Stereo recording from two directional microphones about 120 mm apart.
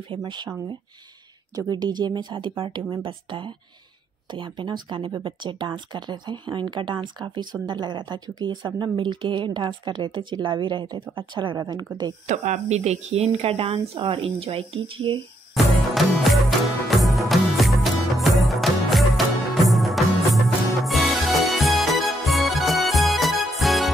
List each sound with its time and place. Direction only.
0.1 s a woman's voice: 40° right (ahead or behind)
1.5 s a woman's voice: 35° right (ahead or behind)
12.3 s speech: 70° right (ahead or behind); by 15.1 s 50° right (ahead or behind)
15.5 s music: centre (ahead or behind)